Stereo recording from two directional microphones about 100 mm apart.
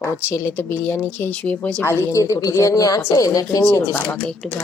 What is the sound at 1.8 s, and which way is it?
A woman's voice, 25° left (ahead or behind).